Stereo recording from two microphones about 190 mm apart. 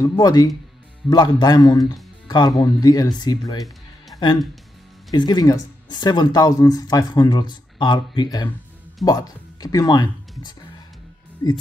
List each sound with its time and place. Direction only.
0.0 s speech: 20° left (ahead or behind)
4.1 s music: 25° left (ahead or behind)
5.1 s speech: 20° left (ahead or behind)
11.4 s speech: 20° left (ahead or behind)